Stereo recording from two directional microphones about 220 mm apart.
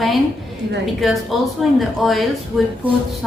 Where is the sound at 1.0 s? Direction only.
Centre (ahead or behind).